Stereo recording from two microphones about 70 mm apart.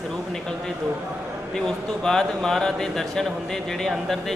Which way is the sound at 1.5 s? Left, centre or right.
Centre.